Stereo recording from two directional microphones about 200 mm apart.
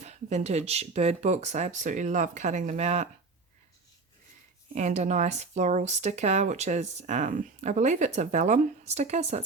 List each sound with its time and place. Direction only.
0.0 s speech: 35° right (ahead or behind)
4.7 s speech: 35° right (ahead or behind)